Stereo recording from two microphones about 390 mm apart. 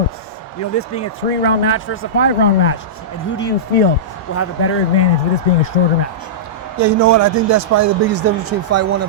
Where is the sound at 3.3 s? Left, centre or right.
Left.